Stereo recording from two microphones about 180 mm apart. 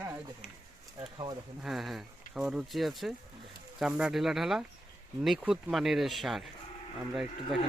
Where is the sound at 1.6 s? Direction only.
Centre (ahead or behind).